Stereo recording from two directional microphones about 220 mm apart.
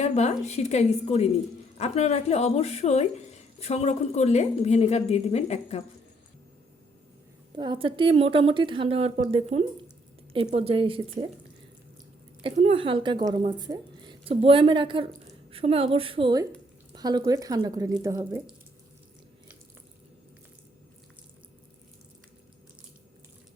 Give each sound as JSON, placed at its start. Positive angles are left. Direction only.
{"t": 0.0, "sound": "a woman's voice", "side_deg": 30}
{"t": 7.5, "sound": "speech", "side_deg": -20}
{"t": 12.4, "sound": "speech", "side_deg": -25}